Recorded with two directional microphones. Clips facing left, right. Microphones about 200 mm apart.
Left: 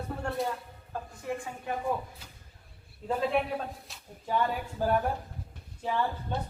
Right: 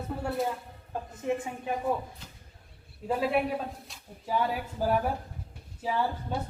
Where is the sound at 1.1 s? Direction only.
20° right (ahead or behind).